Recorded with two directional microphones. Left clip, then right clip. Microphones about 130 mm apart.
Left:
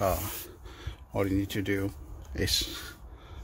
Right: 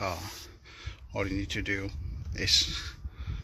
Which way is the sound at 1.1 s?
25° left (ahead or behind).